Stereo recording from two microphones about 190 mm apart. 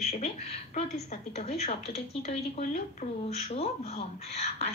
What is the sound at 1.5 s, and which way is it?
A woman's voice, 35° left (ahead or behind).